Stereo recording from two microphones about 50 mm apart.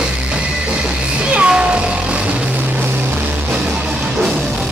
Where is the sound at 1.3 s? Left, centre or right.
Centre.